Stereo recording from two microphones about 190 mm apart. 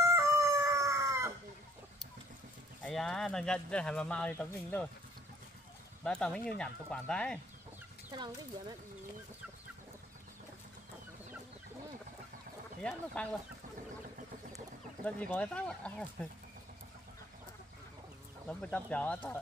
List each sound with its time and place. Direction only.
0.1 s chicken: 15° right (ahead or behind)
2.8 s speech: centre (ahead or behind)
6.0 s speech: 5° left (ahead or behind)
8.1 s speech: 20° right (ahead or behind)
12.8 s speech: 5° left (ahead or behind)
15.0 s speech: 5° left (ahead or behind)
18.5 s speech: 5° left (ahead or behind)